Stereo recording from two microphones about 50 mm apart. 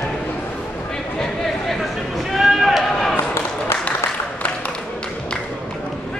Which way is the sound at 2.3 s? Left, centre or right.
Centre.